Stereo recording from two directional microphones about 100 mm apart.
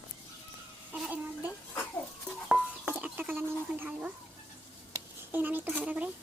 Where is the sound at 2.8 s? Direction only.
20° right (ahead or behind).